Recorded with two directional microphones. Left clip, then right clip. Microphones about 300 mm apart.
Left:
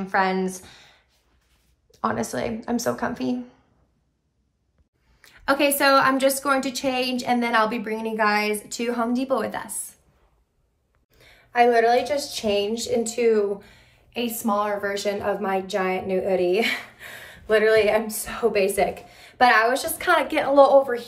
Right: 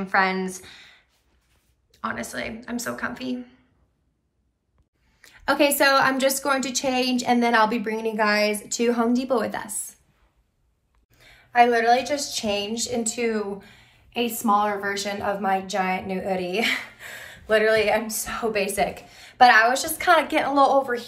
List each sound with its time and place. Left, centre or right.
0.0 s a woman's voice: centre
5.2 s speech: centre
11.1 s speech: centre